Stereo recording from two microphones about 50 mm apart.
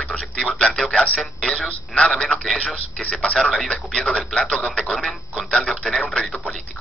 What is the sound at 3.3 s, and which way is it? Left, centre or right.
Speech, centre.